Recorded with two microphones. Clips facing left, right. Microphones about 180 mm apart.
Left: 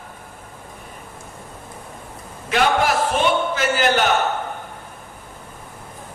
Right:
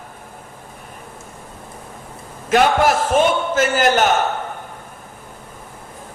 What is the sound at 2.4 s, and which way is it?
A man's voice, 45° right (ahead or behind).